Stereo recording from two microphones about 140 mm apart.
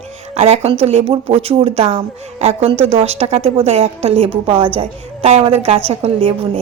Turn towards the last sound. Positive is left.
turn(degrees=-45)  # may be behind; listen again after turning